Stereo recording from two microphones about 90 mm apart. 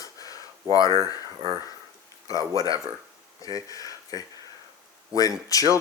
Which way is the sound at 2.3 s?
40° left (ahead or behind).